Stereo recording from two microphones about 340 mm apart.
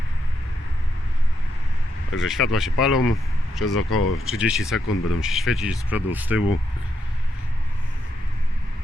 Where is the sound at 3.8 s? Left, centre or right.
Left.